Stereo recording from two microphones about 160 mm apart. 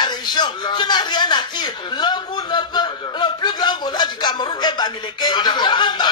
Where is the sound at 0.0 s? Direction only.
25° left (ahead or behind).